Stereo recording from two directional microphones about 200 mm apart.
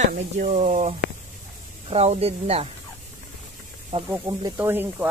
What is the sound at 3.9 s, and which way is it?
Speech, 25° right (ahead or behind).